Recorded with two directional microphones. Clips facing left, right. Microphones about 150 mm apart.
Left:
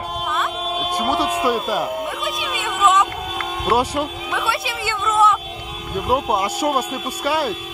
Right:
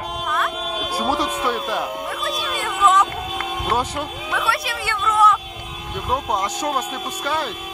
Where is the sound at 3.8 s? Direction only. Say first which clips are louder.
Left 4 dB; 10° left (ahead or behind).